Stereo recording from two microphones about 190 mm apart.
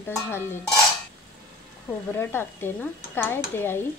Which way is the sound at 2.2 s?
10° left (ahead or behind).